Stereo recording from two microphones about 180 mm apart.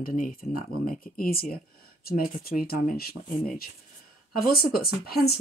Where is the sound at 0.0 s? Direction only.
50° left (ahead or behind).